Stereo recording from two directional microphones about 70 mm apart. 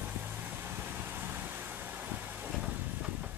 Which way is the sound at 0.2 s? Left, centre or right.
Right.